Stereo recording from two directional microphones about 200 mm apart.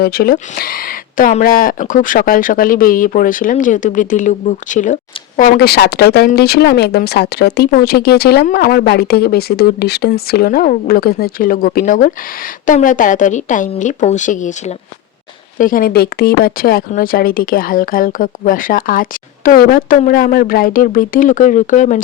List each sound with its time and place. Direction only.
0.0 s speech: 50° left (ahead or behind)
5.4 s speech: 50° left (ahead or behind)